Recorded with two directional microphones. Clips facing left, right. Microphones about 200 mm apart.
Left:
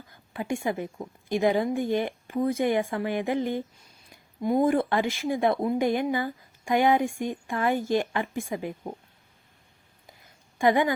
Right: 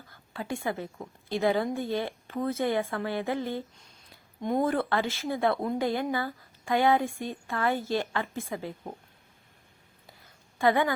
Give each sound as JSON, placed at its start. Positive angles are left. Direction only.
{"t": 0.1, "sound": "a woman's voice", "side_deg": 15}
{"t": 4.4, "sound": "speech", "side_deg": 5}
{"t": 4.6, "sound": "speech", "side_deg": 15}
{"t": 10.6, "sound": "speech", "side_deg": 15}